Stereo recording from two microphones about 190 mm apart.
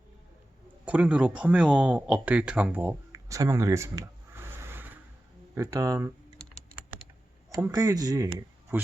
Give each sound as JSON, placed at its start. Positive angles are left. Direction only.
{"t": 0.9, "sound": "speech", "side_deg": -5}
{"t": 7.5, "sound": "speech", "side_deg": -20}